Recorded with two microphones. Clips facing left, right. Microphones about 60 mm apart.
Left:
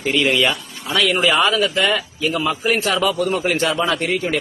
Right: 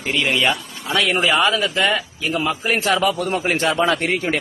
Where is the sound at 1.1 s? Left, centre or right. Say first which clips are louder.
Left 1 dB; centre; by 3.1 s right.